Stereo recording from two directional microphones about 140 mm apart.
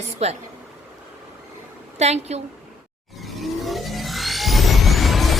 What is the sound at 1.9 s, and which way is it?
Speech, 50° right (ahead or behind).